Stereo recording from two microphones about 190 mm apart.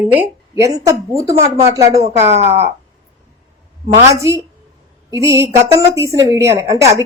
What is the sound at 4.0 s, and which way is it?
A man's voice, 15° right (ahead or behind).